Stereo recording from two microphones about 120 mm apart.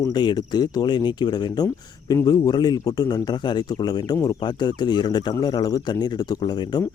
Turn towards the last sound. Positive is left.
turn(degrees=35)  # may be behind; listen again after turning